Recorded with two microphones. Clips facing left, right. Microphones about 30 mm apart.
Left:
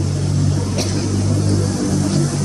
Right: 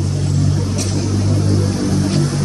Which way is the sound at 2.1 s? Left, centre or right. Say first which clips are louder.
Right 1 dB; right.